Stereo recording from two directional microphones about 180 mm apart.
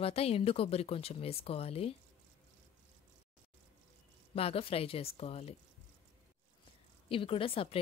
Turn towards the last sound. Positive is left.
turn(degrees=30)  # may be behind; listen again after turning